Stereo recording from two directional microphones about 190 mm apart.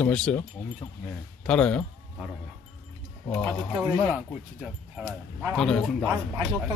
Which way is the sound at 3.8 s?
5° right (ahead or behind).